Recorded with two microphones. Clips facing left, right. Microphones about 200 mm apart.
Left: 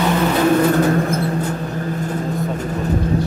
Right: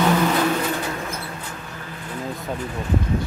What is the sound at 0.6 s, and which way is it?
Vehicle, 50° left (ahead or behind).